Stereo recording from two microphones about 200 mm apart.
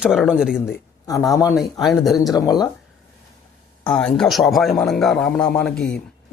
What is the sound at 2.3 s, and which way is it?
Speech, 20° left (ahead or behind).